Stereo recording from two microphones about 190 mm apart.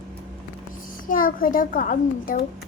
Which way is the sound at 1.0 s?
45° left (ahead or behind).